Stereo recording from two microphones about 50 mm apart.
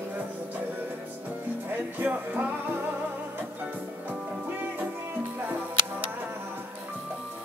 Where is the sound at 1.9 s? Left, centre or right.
Right.